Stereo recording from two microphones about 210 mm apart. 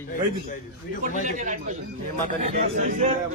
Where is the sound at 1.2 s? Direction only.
35° right (ahead or behind).